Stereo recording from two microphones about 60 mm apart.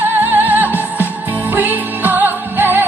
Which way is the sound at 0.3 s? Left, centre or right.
Right.